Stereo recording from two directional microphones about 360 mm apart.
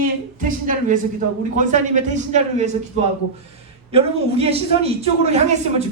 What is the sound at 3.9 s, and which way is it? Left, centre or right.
A man's voice, centre.